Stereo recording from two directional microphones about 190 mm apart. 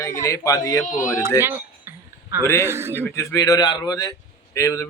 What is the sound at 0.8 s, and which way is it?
Speech, 40° left (ahead or behind).